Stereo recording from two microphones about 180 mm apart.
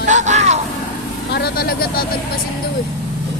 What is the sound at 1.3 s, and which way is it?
Speech, 60° left (ahead or behind).